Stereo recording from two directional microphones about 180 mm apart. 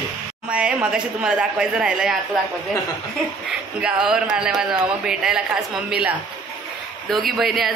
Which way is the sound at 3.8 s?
5° right (ahead or behind).